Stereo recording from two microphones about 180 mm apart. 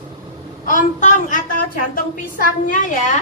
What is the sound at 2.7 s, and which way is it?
Speech, 45° left (ahead or behind).